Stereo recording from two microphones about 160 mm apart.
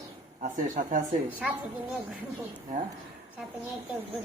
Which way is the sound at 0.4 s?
55° right (ahead or behind).